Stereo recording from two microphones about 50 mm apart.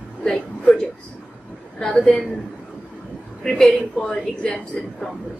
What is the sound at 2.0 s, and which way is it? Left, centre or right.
Speech, centre.